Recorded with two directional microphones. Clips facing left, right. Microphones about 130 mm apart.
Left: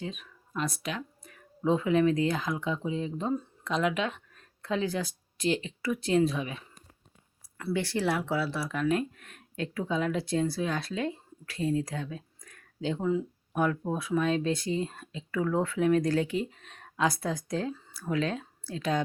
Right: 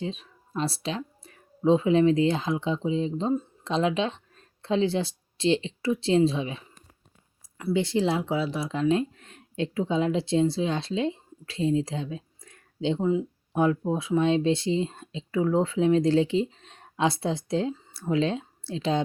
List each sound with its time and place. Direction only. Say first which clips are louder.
0.0 s speech: right 5 dB; 30° right (ahead or behind)